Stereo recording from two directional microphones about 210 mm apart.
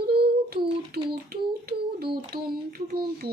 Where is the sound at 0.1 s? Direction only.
50° right (ahead or behind).